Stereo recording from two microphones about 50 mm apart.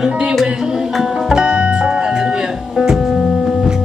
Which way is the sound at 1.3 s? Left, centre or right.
Centre.